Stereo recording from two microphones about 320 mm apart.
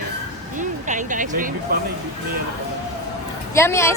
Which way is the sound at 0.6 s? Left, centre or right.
Right.